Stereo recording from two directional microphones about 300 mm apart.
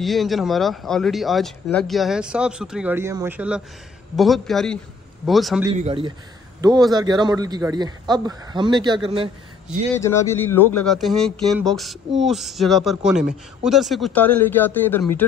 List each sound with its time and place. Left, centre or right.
0.0 s speech: centre
5.7 s a man's voice: centre
9.9 s speech: centre